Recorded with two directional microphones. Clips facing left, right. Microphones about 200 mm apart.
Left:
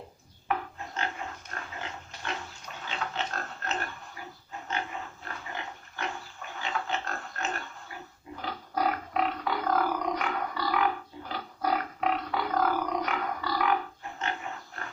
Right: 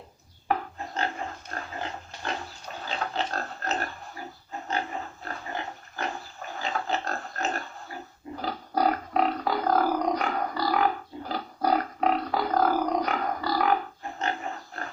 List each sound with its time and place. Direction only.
0.4 s dog: 35° right (ahead or behind)
8.4 s music: 35° right (ahead or behind)